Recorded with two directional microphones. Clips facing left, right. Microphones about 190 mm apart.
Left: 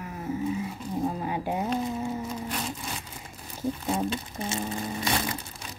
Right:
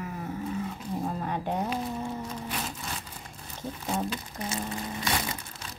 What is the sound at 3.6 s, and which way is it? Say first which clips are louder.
Speech: left 4 dB; 10° left (ahead or behind).